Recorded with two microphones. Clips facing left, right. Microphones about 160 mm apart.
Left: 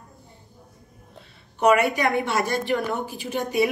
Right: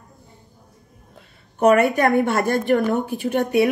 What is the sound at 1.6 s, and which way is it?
A woman's voice, 45° right (ahead or behind).